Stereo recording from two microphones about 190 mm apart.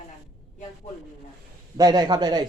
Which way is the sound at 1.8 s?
20° right (ahead or behind).